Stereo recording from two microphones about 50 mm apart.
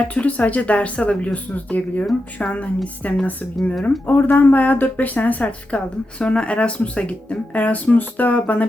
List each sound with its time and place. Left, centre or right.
0.1 s speech: left
4.0 s speech: left